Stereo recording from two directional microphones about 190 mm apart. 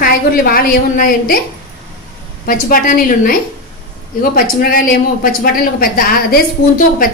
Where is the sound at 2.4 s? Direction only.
50° left (ahead or behind).